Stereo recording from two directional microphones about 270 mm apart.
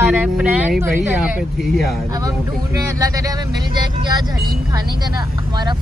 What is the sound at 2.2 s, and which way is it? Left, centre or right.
Speech, centre.